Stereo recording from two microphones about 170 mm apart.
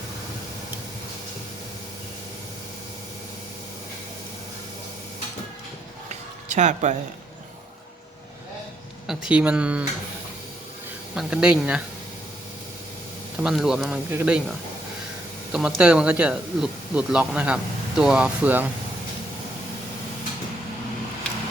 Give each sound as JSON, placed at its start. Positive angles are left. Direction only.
{"t": 6.5, "sound": "speech", "side_deg": -45}
{"t": 9.0, "sound": "speech", "side_deg": -5}
{"t": 11.1, "sound": "speech", "side_deg": -5}
{"t": 13.4, "sound": "speech", "side_deg": 0}
{"t": 15.5, "sound": "speech", "side_deg": -5}